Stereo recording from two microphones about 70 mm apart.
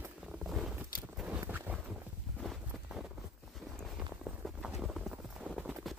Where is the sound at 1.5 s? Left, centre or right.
Right.